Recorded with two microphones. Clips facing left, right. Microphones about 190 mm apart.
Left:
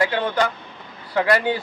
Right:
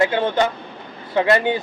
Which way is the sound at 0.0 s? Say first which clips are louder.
Right 3 dB; 25° right (ahead or behind).